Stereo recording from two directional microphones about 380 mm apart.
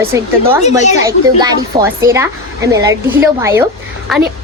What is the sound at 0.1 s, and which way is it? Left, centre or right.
Speech, centre.